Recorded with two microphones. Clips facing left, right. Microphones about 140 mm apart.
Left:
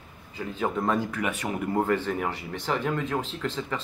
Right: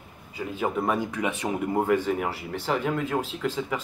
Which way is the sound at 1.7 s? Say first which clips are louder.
Right 2 dB; 10° right (ahead or behind).